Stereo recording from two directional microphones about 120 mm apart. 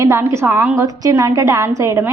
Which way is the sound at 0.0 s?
25° right (ahead or behind).